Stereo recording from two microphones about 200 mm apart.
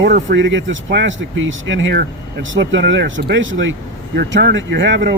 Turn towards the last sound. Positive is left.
turn(degrees=-60)  # may be behind; listen again after turning